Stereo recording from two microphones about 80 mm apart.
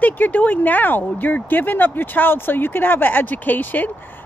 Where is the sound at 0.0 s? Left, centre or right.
Left.